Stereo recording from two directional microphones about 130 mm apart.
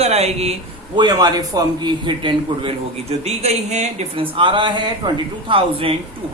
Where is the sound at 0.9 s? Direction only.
35° right (ahead or behind); by 4.1 s 60° right (ahead or behind).